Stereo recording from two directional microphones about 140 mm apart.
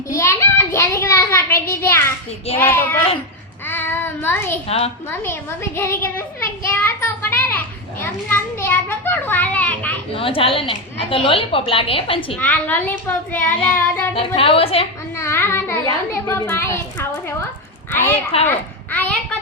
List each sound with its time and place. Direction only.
0.1 s child singing: 20° left (ahead or behind)
1.6 s a woman's voice: 15° left (ahead or behind)
2.6 s child singing: 15° left (ahead or behind)
6.7 s a sound: 15° left (ahead or behind)
8.0 s children playing: 15° left (ahead or behind)
10.2 s a woman's voice: 40° left (ahead or behind)
12.4 s child singing: 10° left (ahead or behind)
14.2 s a woman's voice: 40° left (ahead or behind)
15.2 s child singing: 15° left (ahead or behind)
15.9 s a woman's voice: 25° left (ahead or behind)
17.9 s child singing: 15° left (ahead or behind)
18.4 s a sound: 15° left (ahead or behind)